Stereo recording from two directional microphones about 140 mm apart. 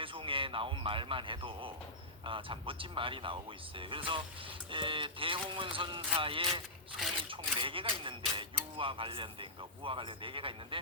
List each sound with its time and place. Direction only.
0.0 s speech: 40° right (ahead or behind)